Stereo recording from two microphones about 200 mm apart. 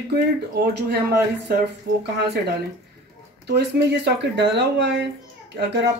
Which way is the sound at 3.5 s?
55° right (ahead or behind).